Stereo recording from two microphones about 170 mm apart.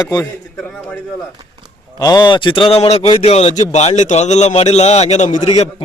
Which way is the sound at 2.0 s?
25° left (ahead or behind).